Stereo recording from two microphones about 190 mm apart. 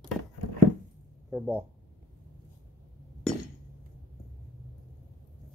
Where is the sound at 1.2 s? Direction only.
5° right (ahead or behind).